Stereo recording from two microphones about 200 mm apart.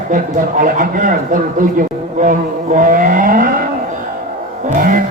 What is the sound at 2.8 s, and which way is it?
Speech, 40° right (ahead or behind).